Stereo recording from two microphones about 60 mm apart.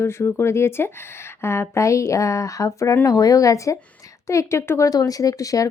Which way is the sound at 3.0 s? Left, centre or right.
Left.